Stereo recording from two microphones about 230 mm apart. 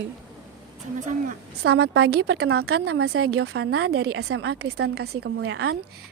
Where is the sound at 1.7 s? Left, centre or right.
Right.